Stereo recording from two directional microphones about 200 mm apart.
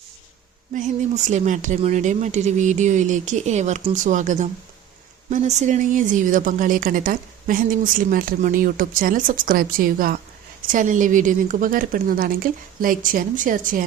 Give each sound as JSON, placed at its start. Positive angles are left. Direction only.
{"t": 0.7, "sound": "a woman's voice", "side_deg": -40}